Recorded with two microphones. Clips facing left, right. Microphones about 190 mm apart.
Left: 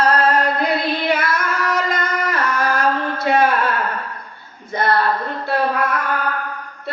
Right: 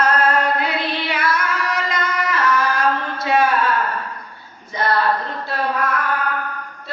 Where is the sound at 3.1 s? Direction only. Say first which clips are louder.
Left 2 dB; 55° left (ahead or behind).